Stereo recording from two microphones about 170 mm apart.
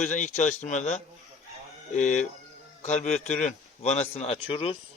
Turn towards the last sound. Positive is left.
turn(degrees=35)  # may be behind; listen again after turning